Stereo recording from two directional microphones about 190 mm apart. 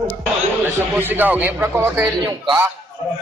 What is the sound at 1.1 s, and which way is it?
Speech, 10° right (ahead or behind).